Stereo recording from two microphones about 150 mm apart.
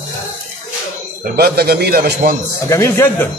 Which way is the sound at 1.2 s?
90° right.